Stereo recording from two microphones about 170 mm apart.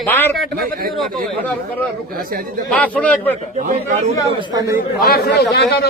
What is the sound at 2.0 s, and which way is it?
Speech, 55° right (ahead or behind).